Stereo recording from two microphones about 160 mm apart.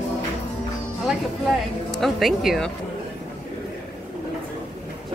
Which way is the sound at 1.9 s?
Centre (ahead or behind).